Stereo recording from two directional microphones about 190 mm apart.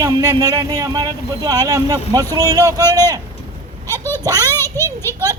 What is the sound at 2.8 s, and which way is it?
A child's voice, 15° left (ahead or behind).